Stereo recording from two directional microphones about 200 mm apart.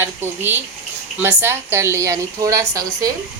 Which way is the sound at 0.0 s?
10° right (ahead or behind).